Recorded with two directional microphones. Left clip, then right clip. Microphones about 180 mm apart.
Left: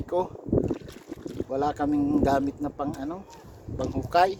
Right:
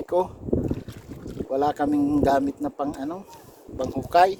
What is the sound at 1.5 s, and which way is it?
Speech, 10° right (ahead or behind).